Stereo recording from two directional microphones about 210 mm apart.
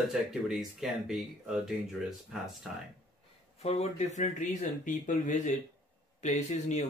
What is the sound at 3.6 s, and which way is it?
Speech, 30° left (ahead or behind).